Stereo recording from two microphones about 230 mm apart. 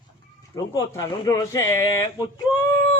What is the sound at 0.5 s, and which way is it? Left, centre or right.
Speech, centre.